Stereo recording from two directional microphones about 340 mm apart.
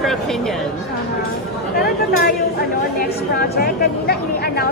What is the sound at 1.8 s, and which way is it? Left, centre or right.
A woman's voice, left.